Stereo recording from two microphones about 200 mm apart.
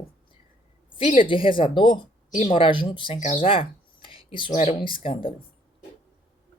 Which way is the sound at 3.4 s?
25° left (ahead or behind).